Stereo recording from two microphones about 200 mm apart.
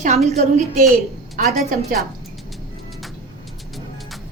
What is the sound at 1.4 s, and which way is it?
Speech, 45° right (ahead or behind).